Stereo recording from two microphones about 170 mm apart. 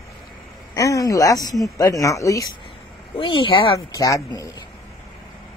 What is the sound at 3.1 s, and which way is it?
Speech, 30° left (ahead or behind).